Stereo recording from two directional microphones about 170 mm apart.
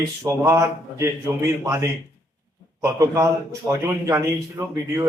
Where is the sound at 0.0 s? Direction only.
15° right (ahead or behind).